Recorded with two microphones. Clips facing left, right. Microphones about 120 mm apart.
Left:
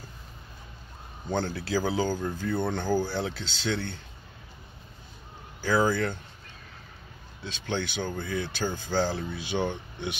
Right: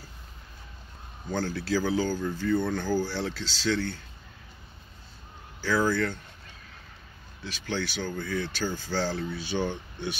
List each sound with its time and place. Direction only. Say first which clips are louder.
1.3 s speech: even; 15° left (ahead or behind)
5.6 s speech: left 1 dB; 15° left (ahead or behind)
7.4 s speech: left 1 dB; 20° left (ahead or behind)